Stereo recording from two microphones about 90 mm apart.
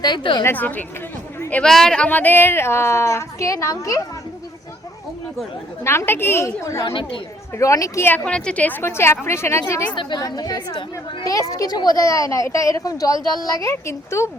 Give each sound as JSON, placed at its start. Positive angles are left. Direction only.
{"t": 0.0, "sound": "a woman's voice", "side_deg": 60}
{"t": 0.4, "sound": "a woman's voice", "side_deg": 20}
{"t": 1.6, "sound": "speech", "side_deg": 5}
{"t": 2.0, "sound": "a woman's voice", "side_deg": 20}
{"t": 5.8, "sound": "a woman's voice", "side_deg": 30}
{"t": 8.2, "sound": "a woman's voice", "side_deg": 10}
{"t": 9.9, "sound": "speech", "side_deg": 60}
{"t": 10.2, "sound": "a woman's voice", "side_deg": 45}